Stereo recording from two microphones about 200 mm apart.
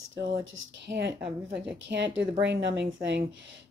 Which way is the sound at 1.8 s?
60° right (ahead or behind).